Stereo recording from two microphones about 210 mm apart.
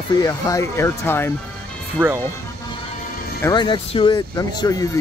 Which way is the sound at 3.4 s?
20° left (ahead or behind).